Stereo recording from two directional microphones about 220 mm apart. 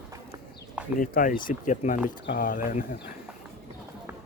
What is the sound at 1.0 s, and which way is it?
Speech, 40° left (ahead or behind).